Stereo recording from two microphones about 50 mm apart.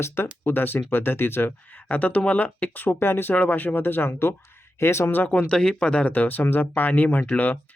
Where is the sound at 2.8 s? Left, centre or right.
Left.